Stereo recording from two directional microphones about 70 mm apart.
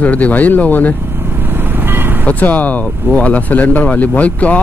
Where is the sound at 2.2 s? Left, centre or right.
Left.